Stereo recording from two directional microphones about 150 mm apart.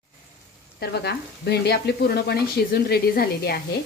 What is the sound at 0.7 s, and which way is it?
A woman's voice, 90° left.